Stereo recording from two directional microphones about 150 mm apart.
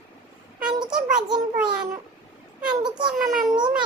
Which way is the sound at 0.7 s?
30° right (ahead or behind).